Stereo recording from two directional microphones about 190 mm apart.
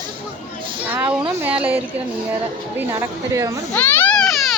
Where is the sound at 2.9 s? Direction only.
15° right (ahead or behind).